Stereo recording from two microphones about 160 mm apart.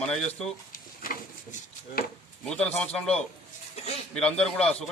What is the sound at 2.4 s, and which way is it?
A man's voice, 5° left (ahead or behind).